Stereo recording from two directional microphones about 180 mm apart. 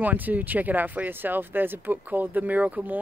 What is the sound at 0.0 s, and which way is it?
Speech, 10° right (ahead or behind).